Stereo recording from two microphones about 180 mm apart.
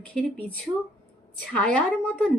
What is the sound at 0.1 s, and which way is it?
Speech, 10° left (ahead or behind).